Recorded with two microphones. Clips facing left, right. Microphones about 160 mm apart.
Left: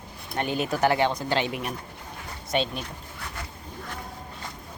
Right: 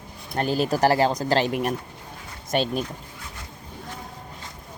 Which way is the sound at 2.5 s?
40° right (ahead or behind).